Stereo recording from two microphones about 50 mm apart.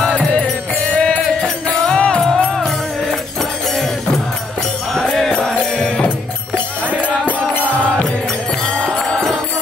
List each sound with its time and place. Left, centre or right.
0.9 s music: left
4.9 s music: centre
7.0 s music: left
8.7 s music: centre